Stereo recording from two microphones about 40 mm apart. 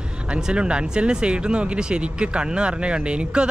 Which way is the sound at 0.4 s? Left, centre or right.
Right.